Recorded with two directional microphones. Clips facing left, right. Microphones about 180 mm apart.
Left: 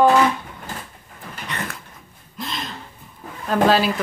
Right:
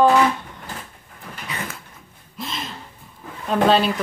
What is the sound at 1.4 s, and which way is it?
Dog, centre (ahead or behind).